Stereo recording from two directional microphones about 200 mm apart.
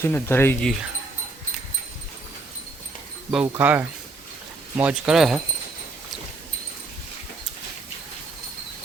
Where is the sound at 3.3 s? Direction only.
5° right (ahead or behind).